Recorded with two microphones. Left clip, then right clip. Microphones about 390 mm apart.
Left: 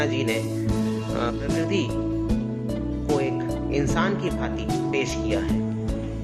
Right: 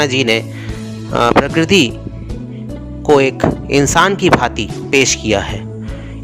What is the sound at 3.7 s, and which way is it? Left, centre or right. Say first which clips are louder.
Speech: right 13 dB; right.